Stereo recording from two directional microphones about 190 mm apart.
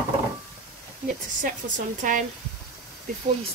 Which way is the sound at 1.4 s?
45° right (ahead or behind).